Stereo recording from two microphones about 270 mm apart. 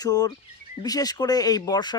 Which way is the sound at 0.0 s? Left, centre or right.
Centre.